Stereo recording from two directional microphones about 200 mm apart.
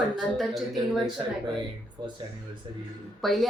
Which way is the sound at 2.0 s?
25° right (ahead or behind).